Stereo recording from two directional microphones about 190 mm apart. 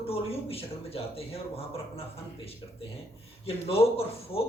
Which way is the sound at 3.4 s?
30° left (ahead or behind).